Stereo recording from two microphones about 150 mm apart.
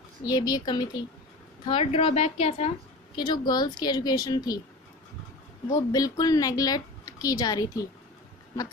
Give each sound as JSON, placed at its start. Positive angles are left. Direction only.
{"t": 0.3, "sound": "a woman's voice", "side_deg": 25}
{"t": 1.7, "sound": "speech", "side_deg": 40}
{"t": 3.2, "sound": "a woman's voice", "side_deg": 30}
{"t": 5.9, "sound": "a woman's voice", "side_deg": 25}